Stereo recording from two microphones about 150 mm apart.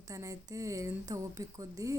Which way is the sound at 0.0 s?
20° right (ahead or behind).